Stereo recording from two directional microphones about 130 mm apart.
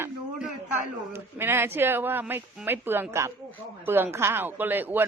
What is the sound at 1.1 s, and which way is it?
Speech, 15° right (ahead or behind).